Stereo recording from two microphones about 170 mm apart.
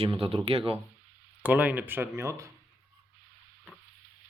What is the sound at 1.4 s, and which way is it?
Speech, 10° right (ahead or behind).